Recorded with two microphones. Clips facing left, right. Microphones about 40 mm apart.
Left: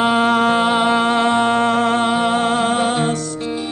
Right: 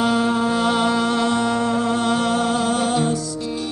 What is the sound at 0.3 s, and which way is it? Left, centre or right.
Music, left.